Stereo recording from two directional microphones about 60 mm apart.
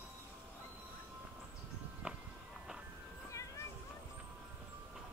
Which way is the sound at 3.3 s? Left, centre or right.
Left.